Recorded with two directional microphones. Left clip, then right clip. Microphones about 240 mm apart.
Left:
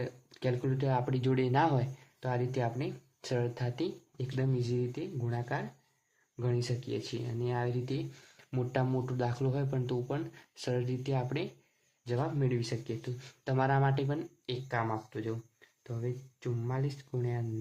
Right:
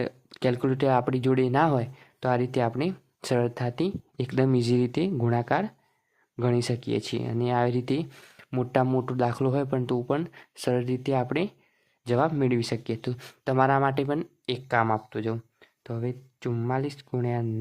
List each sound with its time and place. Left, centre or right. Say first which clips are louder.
0.0 s speech: right 9 dB; right